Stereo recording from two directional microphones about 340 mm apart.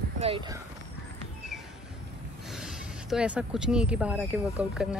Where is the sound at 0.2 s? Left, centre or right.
Centre.